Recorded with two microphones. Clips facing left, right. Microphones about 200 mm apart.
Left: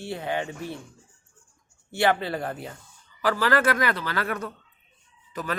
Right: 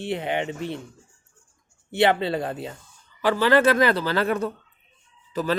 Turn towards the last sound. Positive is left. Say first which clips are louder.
# right 7 dB
turn(degrees=-30)  # may be behind; listen again after turning